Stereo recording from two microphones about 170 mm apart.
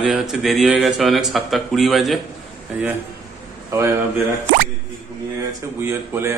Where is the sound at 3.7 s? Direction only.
15° right (ahead or behind).